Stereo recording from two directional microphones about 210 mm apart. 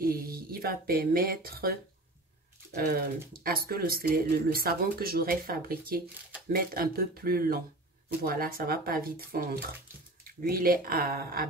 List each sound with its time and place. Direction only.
0.0 s speech: 45° right (ahead or behind)